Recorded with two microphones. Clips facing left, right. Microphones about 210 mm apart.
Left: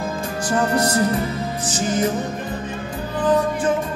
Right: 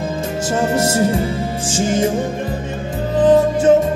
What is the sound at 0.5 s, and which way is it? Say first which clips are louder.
Music: right 2 dB; 25° right (ahead or behind).